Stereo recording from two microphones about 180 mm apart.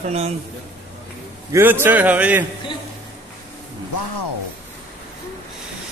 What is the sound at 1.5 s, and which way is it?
Speech, 10° right (ahead or behind).